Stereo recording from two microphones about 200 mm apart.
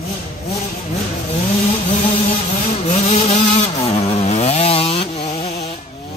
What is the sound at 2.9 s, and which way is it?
Vehicle, 30° left (ahead or behind).